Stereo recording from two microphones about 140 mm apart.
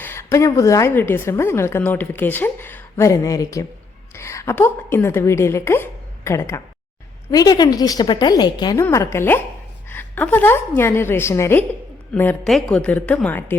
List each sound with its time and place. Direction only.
0.0 s a woman's voice: 20° left (ahead or behind)
8.8 s a woman's voice: 20° left (ahead or behind)
12.5 s a woman's voice: 5° left (ahead or behind)